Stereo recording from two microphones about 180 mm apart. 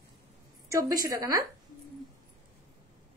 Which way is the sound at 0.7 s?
15° right (ahead or behind).